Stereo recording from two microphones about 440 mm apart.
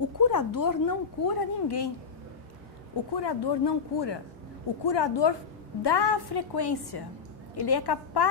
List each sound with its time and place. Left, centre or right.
0.2 s speech: left
3.2 s a woman's voice: left